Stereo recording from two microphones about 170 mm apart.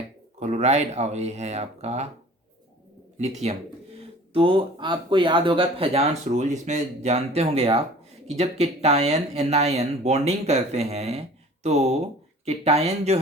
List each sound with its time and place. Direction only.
0.3 s speech: 40° right (ahead or behind)
3.2 s speech: 40° right (ahead or behind)